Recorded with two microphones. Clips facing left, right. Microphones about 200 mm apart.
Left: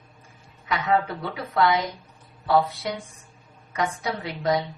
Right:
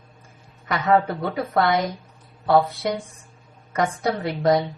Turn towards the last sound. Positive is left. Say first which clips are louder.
# right 5 dB
turn(degrees=-45)  # may be behind; listen again after turning